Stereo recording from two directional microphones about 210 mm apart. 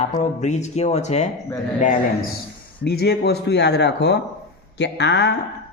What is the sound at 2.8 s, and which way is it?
Speech, 50° left (ahead or behind).